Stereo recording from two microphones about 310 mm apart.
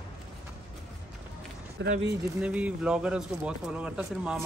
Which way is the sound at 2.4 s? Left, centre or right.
Centre.